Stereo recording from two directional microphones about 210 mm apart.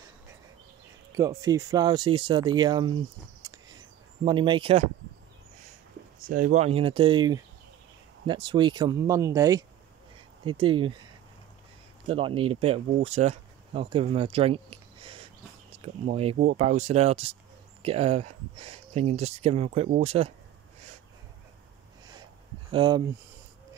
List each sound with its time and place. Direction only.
1.1 s speech: 15° right (ahead or behind)
3.4 s a sound: 20° right (ahead or behind)
4.2 s speech: 25° right (ahead or behind)
6.2 s speech: 40° right (ahead or behind); by 11.0 s 25° right (ahead or behind)
12.1 s speech: 25° right (ahead or behind)
22.7 s speech: 25° right (ahead or behind)